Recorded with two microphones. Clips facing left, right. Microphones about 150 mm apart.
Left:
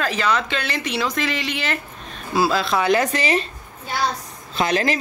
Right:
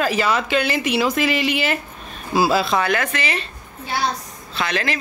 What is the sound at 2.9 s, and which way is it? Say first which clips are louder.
Speech: left 4 dB; 35° left (ahead or behind).